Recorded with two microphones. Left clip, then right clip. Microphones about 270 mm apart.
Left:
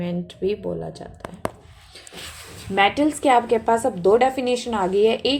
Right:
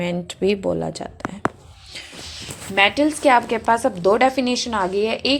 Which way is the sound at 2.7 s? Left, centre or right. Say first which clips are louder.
Right 2 dB; centre.